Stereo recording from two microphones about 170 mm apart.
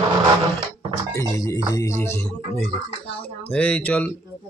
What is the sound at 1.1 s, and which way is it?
Speech, 20° left (ahead or behind).